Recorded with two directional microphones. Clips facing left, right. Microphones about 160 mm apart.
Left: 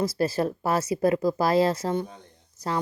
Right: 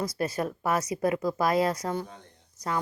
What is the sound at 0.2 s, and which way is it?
Speech, 30° left (ahead or behind).